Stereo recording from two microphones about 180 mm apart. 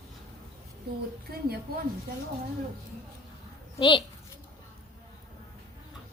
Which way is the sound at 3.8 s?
25° left (ahead or behind).